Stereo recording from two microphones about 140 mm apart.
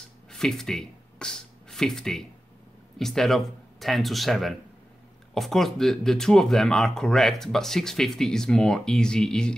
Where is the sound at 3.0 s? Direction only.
Centre (ahead or behind).